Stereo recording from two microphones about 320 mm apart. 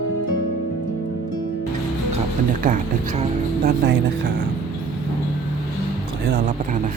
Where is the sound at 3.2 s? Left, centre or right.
Right.